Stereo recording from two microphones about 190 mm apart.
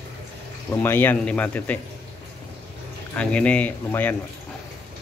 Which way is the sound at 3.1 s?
5° left (ahead or behind).